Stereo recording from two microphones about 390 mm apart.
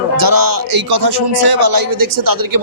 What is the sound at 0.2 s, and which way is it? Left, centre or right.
Speech, right.